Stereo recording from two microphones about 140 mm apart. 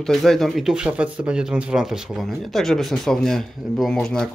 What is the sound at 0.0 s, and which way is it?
Speech, centre (ahead or behind).